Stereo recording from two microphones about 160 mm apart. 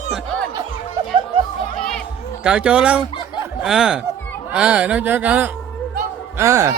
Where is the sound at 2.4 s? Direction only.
5° right (ahead or behind).